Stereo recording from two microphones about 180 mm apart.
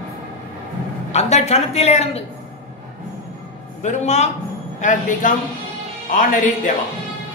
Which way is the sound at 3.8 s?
40° left (ahead or behind).